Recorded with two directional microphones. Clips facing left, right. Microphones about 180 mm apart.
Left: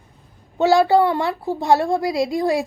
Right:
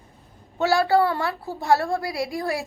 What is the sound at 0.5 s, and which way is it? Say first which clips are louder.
A woman's voice: left 5 dB; 20° left (ahead or behind).